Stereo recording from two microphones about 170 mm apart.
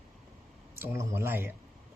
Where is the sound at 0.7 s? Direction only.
15° right (ahead or behind).